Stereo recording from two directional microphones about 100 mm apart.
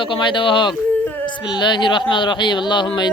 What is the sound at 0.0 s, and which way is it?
Speech, 55° left (ahead or behind).